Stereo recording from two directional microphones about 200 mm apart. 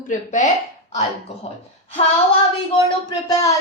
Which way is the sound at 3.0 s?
15° left (ahead or behind).